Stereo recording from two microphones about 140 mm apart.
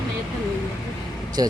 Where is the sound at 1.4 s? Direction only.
25° right (ahead or behind).